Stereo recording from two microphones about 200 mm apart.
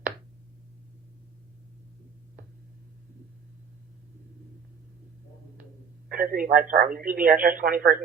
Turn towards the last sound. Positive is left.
turn(degrees=-45)  # may be behind; listen again after turning